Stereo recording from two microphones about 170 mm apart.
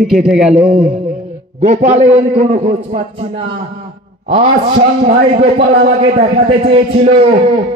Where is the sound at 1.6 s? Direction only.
45° right (ahead or behind).